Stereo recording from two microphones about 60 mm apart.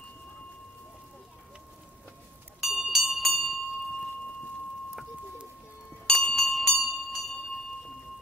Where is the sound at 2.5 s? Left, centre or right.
Centre.